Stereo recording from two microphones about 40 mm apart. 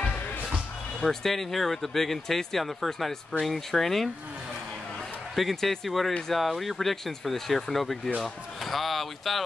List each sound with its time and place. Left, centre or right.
1.0 s speech: centre
5.3 s speech: centre